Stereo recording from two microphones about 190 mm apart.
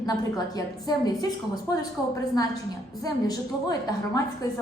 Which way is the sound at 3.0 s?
20° left (ahead or behind).